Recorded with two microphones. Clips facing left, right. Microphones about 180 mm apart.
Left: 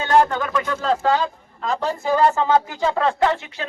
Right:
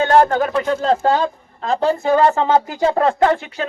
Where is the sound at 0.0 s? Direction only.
50° right (ahead or behind); by 2.8 s 20° right (ahead or behind).